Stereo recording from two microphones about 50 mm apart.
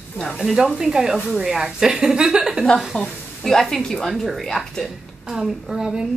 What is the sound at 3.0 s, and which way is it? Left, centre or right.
A woman's voice, centre.